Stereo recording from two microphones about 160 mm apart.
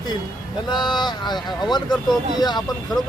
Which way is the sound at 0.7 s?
25° left (ahead or behind).